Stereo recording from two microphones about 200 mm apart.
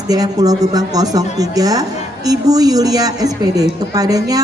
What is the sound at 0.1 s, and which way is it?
A woman's voice, 20° right (ahead or behind).